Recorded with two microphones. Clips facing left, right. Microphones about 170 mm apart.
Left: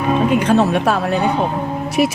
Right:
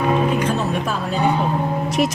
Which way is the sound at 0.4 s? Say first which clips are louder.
Left 7 dB; 70° left (ahead or behind).